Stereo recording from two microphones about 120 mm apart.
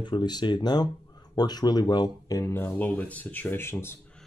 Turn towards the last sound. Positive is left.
turn(degrees=20)  # may be behind; listen again after turning